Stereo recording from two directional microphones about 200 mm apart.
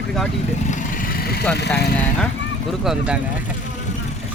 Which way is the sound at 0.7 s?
50° left (ahead or behind).